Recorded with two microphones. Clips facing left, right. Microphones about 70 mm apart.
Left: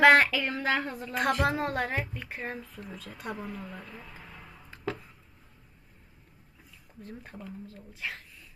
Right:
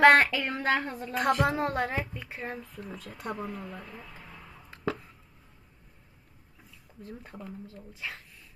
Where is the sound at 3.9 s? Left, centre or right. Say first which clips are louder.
Even; centre.